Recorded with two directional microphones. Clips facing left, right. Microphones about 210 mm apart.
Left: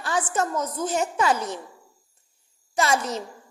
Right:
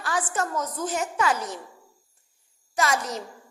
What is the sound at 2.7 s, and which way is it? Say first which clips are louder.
Speech: left 2 dB; 25° left (ahead or behind).